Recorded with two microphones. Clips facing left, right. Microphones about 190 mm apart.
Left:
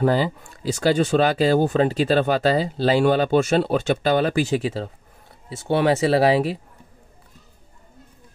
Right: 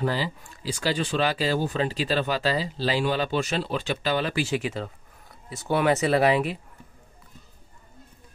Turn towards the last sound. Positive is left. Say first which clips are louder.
# left 4 dB
turn(degrees=35)  # may be behind; listen again after turning